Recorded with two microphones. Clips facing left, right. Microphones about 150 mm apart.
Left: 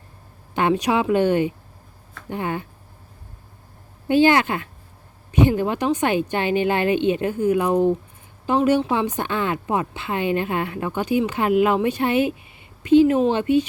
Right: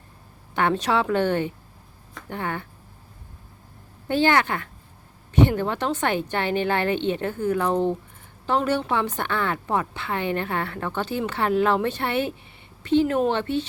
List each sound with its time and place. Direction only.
0.5 s a woman's voice: 15° left (ahead or behind)
4.1 s a woman's voice: 15° left (ahead or behind)